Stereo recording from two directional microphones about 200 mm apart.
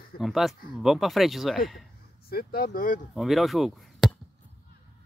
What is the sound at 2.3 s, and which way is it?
Speech, 50° left (ahead or behind).